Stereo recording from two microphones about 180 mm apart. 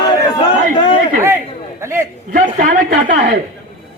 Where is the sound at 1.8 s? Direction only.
15° right (ahead or behind).